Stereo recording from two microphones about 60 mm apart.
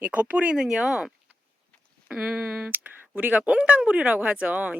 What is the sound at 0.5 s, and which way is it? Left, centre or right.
Speech, centre.